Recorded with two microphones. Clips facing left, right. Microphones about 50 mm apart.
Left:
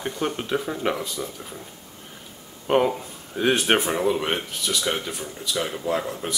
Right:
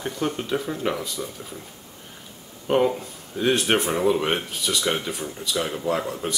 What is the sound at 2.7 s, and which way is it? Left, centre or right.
Speech, centre.